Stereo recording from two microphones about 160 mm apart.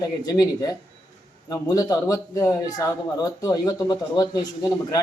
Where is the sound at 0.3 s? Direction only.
20° left (ahead or behind).